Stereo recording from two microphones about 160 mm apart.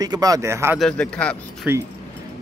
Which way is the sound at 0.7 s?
5° left (ahead or behind).